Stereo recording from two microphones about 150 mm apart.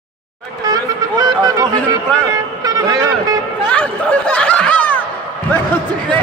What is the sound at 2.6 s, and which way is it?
Speech, 20° right (ahead or behind).